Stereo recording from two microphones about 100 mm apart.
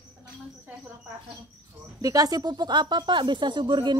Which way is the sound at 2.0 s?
35° right (ahead or behind).